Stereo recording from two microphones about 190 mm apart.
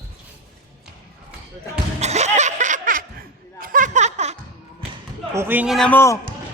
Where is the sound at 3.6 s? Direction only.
45° right (ahead or behind).